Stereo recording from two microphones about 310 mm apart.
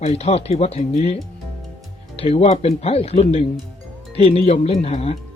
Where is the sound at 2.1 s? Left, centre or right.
Centre.